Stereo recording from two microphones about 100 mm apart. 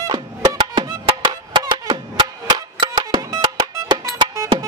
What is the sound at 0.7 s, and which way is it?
Music, 55° right (ahead or behind).